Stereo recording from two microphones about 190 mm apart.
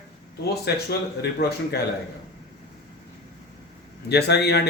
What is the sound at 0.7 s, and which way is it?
Speech, 60° left (ahead or behind).